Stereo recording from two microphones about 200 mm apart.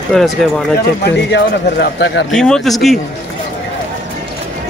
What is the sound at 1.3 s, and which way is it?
A man's voice, 60° left (ahead or behind).